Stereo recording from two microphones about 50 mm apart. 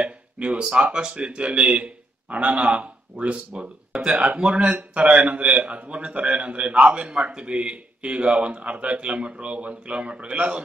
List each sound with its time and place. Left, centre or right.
0.0 s speech: right
3.9 s a man's voice: centre